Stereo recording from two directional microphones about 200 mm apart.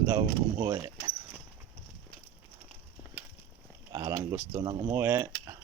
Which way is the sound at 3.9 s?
15° right (ahead or behind).